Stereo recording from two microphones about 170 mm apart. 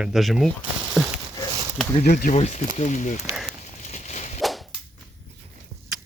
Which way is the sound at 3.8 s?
40° left (ahead or behind).